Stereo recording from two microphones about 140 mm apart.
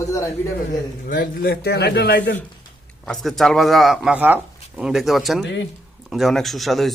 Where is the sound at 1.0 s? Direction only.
90° left.